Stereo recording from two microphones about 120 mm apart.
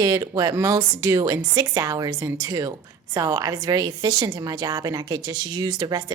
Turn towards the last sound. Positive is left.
turn(degrees=-30)  # may be behind; listen again after turning